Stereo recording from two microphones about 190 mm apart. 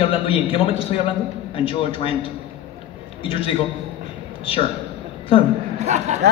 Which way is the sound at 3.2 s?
30° left (ahead or behind).